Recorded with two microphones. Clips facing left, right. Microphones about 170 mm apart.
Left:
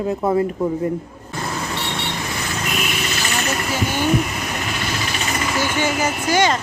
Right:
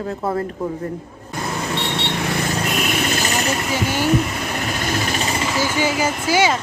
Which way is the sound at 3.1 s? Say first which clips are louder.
Right 3 dB; 40° right (ahead or behind).